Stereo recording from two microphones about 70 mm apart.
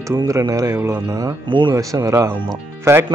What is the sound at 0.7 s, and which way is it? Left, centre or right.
A man's voice, right.